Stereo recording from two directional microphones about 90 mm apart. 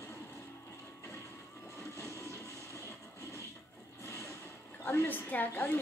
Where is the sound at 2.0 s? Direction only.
35° left (ahead or behind).